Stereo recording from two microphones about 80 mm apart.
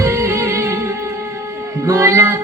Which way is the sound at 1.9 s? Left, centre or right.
Right.